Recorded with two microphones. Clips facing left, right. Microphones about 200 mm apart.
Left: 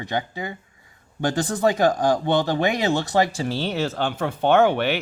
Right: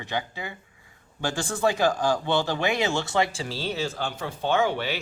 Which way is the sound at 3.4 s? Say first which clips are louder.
Left 5 dB; 60° left (ahead or behind).